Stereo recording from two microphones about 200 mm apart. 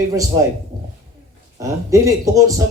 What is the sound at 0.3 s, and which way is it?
Speech, 20° right (ahead or behind).